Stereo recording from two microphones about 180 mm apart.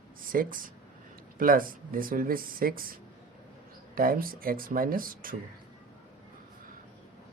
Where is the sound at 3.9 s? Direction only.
55° right (ahead or behind).